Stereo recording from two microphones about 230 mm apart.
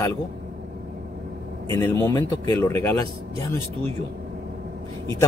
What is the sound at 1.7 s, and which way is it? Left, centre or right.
A man's voice, centre.